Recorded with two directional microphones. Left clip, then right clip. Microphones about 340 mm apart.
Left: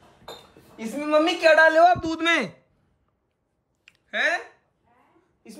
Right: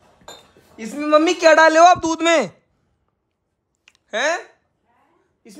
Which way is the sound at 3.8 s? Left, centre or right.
Centre.